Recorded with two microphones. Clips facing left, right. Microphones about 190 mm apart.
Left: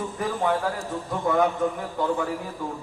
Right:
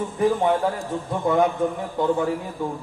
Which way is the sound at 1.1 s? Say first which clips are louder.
Right 2 dB; 20° right (ahead or behind).